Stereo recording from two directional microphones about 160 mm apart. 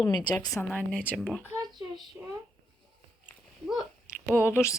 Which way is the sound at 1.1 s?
Centre (ahead or behind).